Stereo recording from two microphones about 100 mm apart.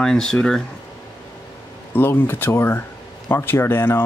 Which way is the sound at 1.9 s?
20° left (ahead or behind).